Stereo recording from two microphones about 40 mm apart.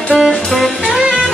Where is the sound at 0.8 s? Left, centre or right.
Centre.